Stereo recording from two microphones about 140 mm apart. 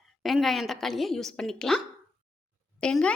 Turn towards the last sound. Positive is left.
turn(degrees=5)  # may be behind; listen again after turning